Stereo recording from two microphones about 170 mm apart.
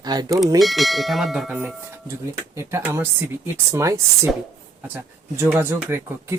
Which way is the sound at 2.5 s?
15° right (ahead or behind).